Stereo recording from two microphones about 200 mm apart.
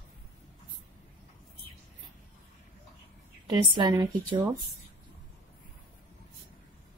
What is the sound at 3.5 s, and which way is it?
Speech, 20° right (ahead or behind).